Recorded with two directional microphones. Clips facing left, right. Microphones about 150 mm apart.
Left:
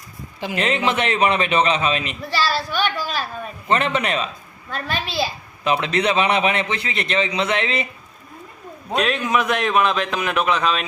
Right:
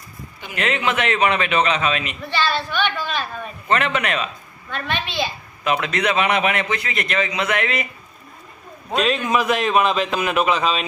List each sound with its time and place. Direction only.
0.5 s a man's voice: 30° left (ahead or behind)
8.9 s a man's voice: centre (ahead or behind)